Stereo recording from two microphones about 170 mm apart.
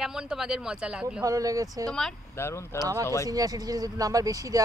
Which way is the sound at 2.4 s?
15° left (ahead or behind).